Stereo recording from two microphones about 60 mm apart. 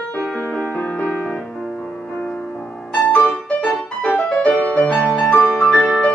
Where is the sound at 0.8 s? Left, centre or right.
Left.